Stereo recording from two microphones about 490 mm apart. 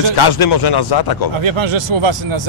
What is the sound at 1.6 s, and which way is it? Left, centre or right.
Speech, right.